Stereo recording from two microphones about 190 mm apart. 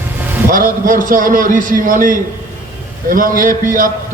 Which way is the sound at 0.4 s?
45° right (ahead or behind).